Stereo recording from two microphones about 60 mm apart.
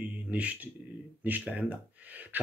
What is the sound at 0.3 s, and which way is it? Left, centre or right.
Speech, right.